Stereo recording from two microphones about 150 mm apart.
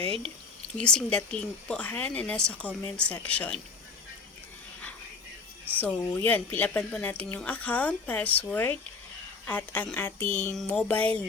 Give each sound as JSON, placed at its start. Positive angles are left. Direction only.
{"t": 0.0, "sound": "speech", "side_deg": -40}
{"t": 0.8, "sound": "speech", "side_deg": 5}
{"t": 5.7, "sound": "speech", "side_deg": 10}